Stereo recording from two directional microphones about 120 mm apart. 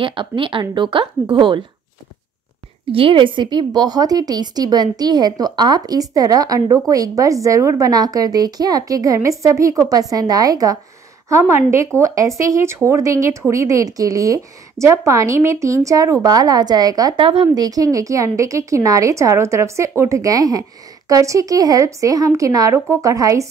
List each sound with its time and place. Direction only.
0.0 s speech: 45° right (ahead or behind)
2.9 s a woman's voice: 50° right (ahead or behind); by 23.4 s 30° right (ahead or behind)